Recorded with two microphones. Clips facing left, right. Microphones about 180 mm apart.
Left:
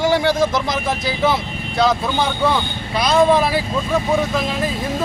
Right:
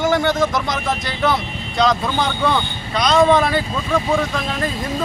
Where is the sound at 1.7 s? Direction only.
5° left (ahead or behind).